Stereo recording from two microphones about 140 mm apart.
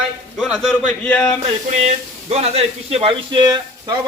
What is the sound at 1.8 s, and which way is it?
Speech, 50° right (ahead or behind).